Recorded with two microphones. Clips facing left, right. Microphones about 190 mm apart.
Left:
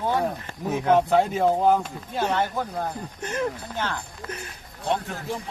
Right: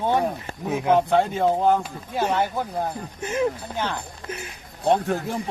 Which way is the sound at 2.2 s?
10° right (ahead or behind).